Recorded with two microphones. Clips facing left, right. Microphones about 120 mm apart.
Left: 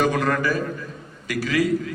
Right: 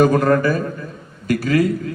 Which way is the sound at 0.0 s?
45° right (ahead or behind).